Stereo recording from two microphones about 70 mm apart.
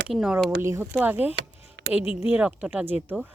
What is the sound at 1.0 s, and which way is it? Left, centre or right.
Speech, right.